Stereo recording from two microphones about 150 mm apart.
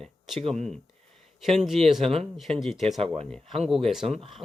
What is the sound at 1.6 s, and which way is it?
Speech, centre (ahead or behind).